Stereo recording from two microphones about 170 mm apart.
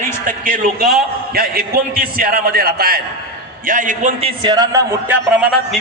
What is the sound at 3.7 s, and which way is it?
Speech, 50° right (ahead or behind).